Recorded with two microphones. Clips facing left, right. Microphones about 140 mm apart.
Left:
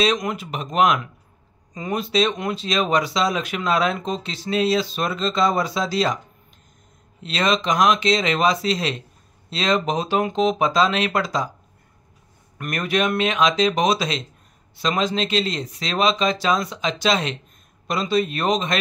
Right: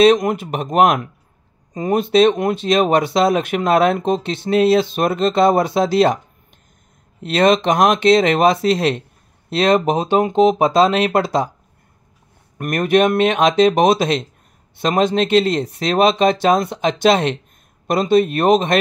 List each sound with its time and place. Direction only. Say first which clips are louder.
0.0 s speech: right 9 dB; 50° right (ahead or behind)
7.2 s speech: right 7 dB; 55° right (ahead or behind)
9.9 s speech: right 5 dB; 25° right (ahead or behind)
10.3 s speech: right 7 dB; 50° right (ahead or behind)
12.5 s speech: right 8 dB; 50° right (ahead or behind)